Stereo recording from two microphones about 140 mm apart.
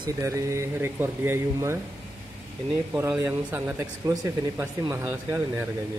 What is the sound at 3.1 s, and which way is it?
Speech, 15° right (ahead or behind).